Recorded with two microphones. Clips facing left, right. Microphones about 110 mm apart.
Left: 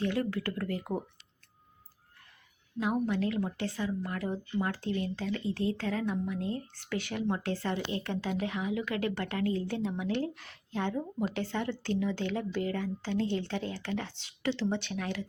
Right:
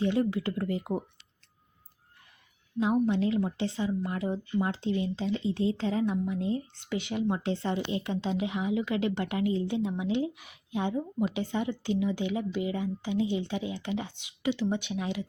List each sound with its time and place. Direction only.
0.0 s a woman's voice: 20° right (ahead or behind)
2.7 s a woman's voice: 20° right (ahead or behind)